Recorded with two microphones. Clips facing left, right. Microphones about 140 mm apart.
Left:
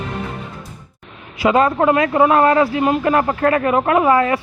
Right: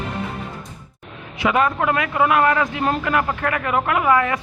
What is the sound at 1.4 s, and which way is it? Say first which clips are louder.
A man's voice: left 5 dB; 35° left (ahead or behind).